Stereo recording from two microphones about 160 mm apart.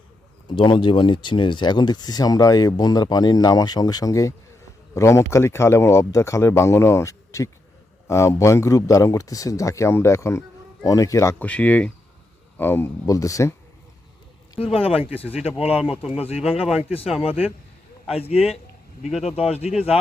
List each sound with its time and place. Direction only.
0.4 s speech: 30° left (ahead or behind)
14.6 s speech: 35° left (ahead or behind)
16.6 s speech: 5° right (ahead or behind)
16.9 s speech: 35° left (ahead or behind)